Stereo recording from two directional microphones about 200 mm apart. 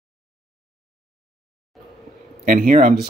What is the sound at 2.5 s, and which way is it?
Speech, 40° right (ahead or behind).